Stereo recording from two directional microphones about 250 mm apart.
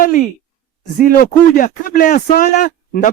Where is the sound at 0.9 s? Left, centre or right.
Left.